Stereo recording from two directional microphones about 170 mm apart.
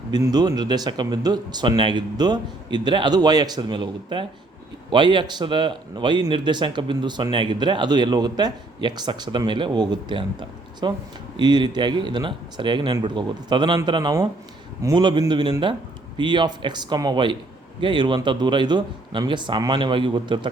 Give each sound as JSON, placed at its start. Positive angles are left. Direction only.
{"t": 0.1, "sound": "a man's voice", "side_deg": -25}